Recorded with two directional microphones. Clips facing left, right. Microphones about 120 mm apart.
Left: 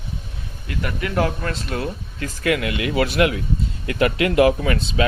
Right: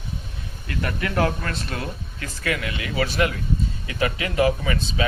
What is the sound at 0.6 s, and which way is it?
Speech, 15° left (ahead or behind).